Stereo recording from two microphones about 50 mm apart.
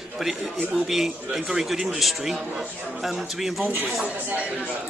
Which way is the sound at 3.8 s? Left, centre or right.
Right.